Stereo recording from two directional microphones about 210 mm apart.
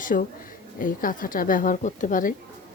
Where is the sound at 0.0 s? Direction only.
40° left (ahead or behind).